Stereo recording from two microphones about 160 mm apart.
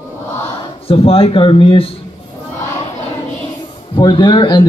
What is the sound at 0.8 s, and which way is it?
Speech, 35° left (ahead or behind).